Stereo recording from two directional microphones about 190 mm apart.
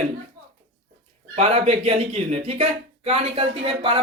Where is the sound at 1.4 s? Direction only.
30° right (ahead or behind).